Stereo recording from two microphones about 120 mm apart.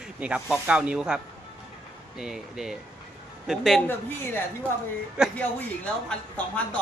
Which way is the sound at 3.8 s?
15° left (ahead or behind).